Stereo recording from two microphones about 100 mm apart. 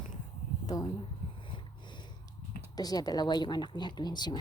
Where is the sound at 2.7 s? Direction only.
40° left (ahead or behind).